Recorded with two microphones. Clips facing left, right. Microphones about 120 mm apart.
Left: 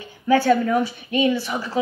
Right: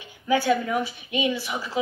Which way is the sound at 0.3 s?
45° left (ahead or behind).